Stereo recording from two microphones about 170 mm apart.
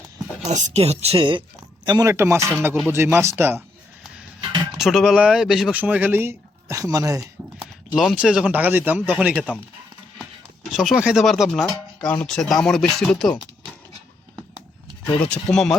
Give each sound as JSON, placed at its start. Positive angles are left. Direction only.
{"t": 0.4, "sound": "speech", "side_deg": -40}
{"t": 2.6, "sound": "speech", "side_deg": -5}
{"t": 2.9, "sound": "speech", "side_deg": -15}
{"t": 4.8, "sound": "speech", "side_deg": 0}
{"t": 7.9, "sound": "speech", "side_deg": -5}
{"t": 10.8, "sound": "speech", "side_deg": 0}
{"t": 15.0, "sound": "speech", "side_deg": 10}